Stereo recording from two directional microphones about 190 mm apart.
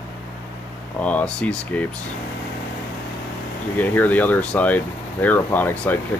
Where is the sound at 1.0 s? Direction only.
5° left (ahead or behind).